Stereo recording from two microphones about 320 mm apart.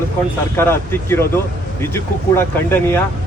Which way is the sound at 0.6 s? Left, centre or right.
Centre.